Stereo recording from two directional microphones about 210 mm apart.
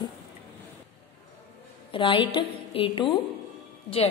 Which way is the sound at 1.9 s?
25° left (ahead or behind).